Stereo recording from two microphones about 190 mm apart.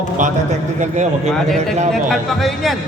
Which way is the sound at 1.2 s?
Centre (ahead or behind).